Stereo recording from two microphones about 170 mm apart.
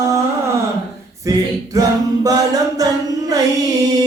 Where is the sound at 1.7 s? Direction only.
20° right (ahead or behind).